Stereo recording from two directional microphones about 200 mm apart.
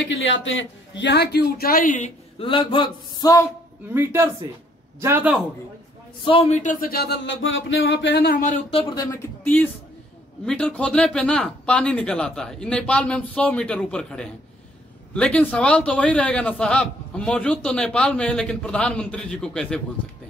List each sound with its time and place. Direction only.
0.0 s a man's voice: 65° left (ahead or behind); by 3.4 s 20° left (ahead or behind)
3.9 s speech: 10° right (ahead or behind)
6.2 s a man's voice: 30° left (ahead or behind); by 8.5 s 45° left (ahead or behind)
8.7 s a man's voice: 25° left (ahead or behind); by 19.8 s 5° left (ahead or behind)